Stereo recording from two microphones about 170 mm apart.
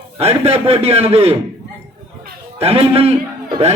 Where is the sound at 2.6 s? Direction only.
35° right (ahead or behind).